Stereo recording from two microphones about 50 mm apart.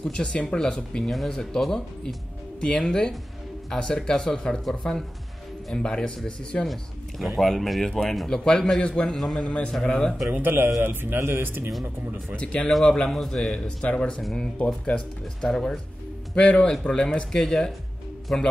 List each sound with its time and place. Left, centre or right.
0.0 s a man's voice: left
5.8 s speech: left
6.6 s a man's voice: centre
9.1 s a man's voice: centre
9.4 s a man's voice: left
10.3 s a man's voice: right
11.1 s speech: right
11.4 s a man's voice: right
12.8 s a man's voice: centre
14.6 s speech: left
15.4 s a man's voice: centre
16.3 s a man's voice: left